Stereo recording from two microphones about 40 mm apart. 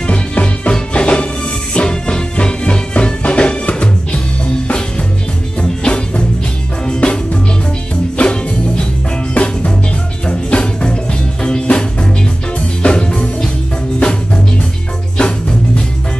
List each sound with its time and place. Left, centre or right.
0.0 s music: left
5.6 s music: left